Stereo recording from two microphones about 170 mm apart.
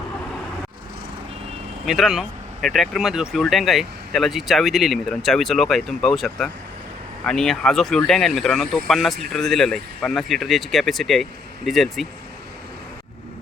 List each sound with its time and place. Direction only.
1.9 s speech: centre (ahead or behind)